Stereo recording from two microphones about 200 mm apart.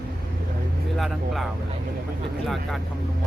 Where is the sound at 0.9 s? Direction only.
Centre (ahead or behind).